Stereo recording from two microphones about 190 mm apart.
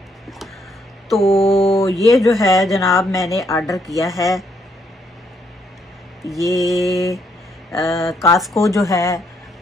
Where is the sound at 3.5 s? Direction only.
15° left (ahead or behind).